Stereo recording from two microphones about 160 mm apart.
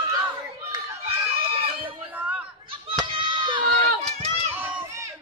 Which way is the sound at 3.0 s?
30° right (ahead or behind).